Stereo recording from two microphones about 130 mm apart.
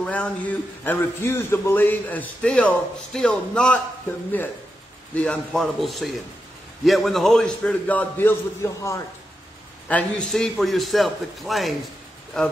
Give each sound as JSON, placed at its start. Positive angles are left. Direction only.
{"t": 0.0, "sound": "a man's voice", "side_deg": 10}
{"t": 5.1, "sound": "a man's voice", "side_deg": 10}
{"t": 9.8, "sound": "a man's voice", "side_deg": 10}